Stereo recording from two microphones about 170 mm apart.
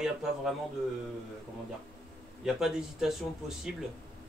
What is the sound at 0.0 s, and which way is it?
Speech, centre (ahead or behind).